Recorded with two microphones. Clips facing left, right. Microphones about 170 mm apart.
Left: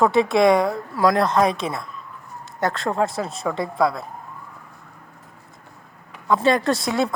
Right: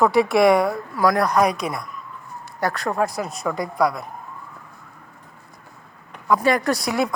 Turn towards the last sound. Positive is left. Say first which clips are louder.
# left 1 dB
turn(degrees=25)  # may be behind; listen again after turning